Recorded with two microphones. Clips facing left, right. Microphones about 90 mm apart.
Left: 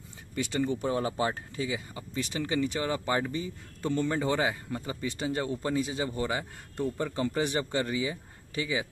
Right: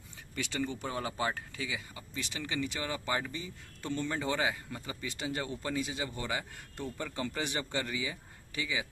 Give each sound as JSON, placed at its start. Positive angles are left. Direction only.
{"t": 0.4, "sound": "speech", "side_deg": 35}